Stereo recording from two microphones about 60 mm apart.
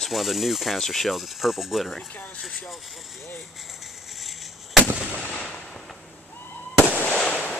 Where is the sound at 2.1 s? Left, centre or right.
Left.